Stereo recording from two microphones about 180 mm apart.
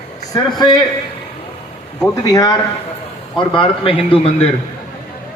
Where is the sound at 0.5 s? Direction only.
25° left (ahead or behind).